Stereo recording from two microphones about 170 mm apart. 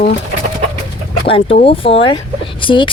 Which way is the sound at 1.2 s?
35° left (ahead or behind).